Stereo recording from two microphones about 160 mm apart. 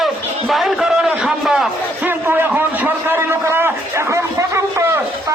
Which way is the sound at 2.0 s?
15° right (ahead or behind).